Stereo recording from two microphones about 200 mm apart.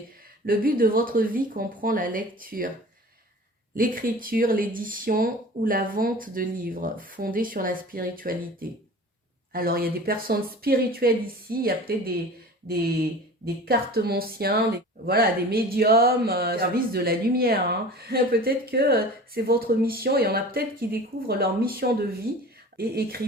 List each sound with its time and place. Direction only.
0.4 s speech: 45° right (ahead or behind)
3.8 s speech: 45° right (ahead or behind)